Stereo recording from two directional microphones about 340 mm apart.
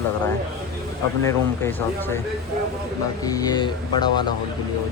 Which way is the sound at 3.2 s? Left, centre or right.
Centre.